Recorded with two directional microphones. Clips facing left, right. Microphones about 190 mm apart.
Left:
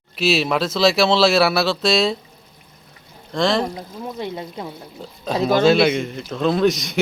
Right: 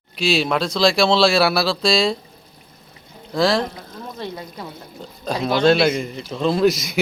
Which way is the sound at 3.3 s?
Centre (ahead or behind).